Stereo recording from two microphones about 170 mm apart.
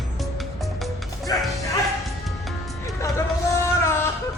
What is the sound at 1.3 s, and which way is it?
Music, 20° left (ahead or behind).